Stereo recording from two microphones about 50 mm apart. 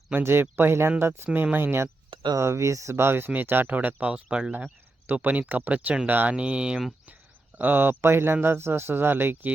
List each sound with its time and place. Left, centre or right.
0.2 s speech: right
2.4 s speech: right
2.9 s speech: right
4.1 s speech: centre
4.5 s speech: right
6.3 s speech: right
7.6 s speech: right